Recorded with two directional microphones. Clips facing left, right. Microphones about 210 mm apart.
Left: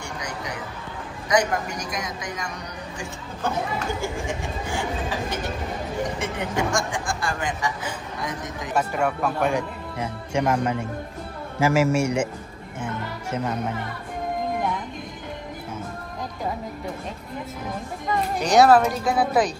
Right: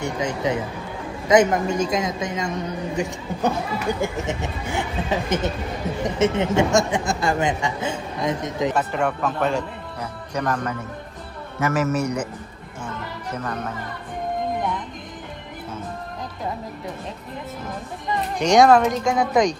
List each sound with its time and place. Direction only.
0.0 s speech: 25° right (ahead or behind)
8.7 s speech: 10° left (ahead or behind)
9.9 s speech: 25° left (ahead or behind)
18.4 s speech: 5° left (ahead or behind)